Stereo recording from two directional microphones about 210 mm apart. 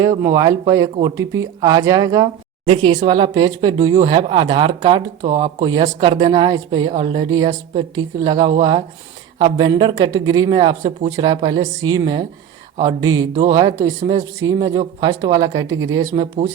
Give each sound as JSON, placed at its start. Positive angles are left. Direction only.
{"t": 0.0, "sound": "speech", "side_deg": -15}